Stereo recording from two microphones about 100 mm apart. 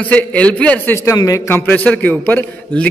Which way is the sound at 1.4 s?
20° left (ahead or behind).